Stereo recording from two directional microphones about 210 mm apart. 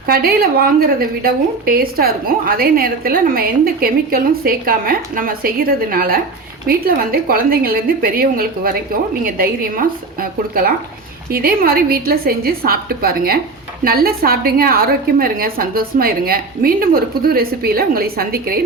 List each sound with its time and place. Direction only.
0.1 s a woman's voice: 45° right (ahead or behind)